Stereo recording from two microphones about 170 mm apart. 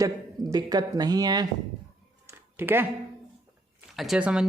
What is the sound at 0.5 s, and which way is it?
Speech, 25° right (ahead or behind).